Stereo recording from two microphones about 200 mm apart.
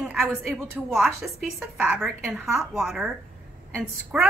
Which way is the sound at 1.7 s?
Centre (ahead or behind).